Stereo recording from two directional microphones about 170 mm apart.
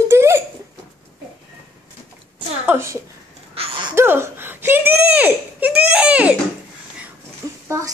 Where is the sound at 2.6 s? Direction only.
15° right (ahead or behind).